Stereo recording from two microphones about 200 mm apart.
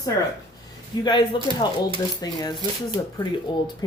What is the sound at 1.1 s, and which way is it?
Speech, 20° left (ahead or behind).